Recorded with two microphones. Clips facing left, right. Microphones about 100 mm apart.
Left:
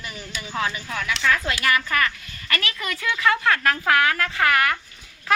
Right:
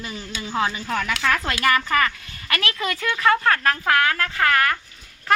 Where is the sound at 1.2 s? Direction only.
65° right (ahead or behind).